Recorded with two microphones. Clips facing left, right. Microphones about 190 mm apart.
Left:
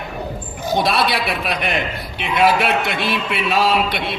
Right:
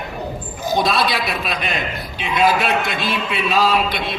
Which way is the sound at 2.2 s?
60° left (ahead or behind).